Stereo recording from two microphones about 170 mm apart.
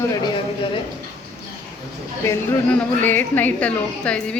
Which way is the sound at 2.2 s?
10° left (ahead or behind).